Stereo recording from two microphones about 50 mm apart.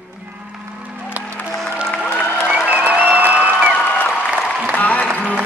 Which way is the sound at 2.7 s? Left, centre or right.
Right.